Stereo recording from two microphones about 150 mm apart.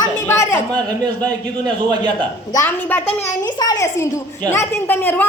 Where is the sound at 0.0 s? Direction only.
20° left (ahead or behind).